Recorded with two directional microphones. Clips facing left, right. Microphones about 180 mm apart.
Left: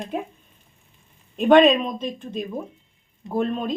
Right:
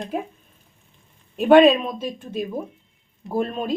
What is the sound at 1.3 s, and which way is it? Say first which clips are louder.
Speech: right 1 dB; 5° right (ahead or behind).